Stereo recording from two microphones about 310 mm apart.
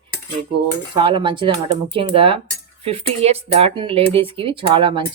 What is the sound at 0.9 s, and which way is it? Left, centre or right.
Speech, centre.